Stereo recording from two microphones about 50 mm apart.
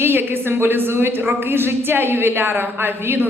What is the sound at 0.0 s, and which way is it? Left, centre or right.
A woman's voice, right.